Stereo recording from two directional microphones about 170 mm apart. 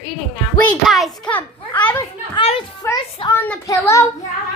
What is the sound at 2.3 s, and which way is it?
Speech, 35° left (ahead or behind).